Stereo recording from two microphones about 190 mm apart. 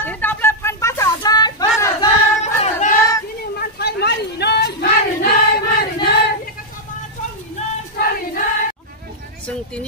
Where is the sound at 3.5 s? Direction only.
55° left (ahead or behind).